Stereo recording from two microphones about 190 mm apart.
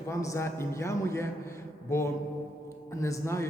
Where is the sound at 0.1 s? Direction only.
15° left (ahead or behind).